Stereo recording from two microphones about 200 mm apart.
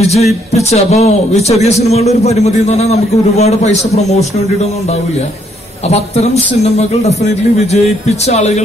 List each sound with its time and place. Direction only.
0.0 s speech: 30° left (ahead or behind)
5.9 s speech: 30° left (ahead or behind)